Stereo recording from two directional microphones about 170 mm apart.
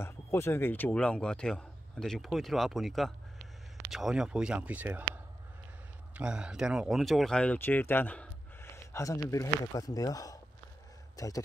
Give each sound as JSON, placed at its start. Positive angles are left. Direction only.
{"t": 0.0, "sound": "speech", "side_deg": 15}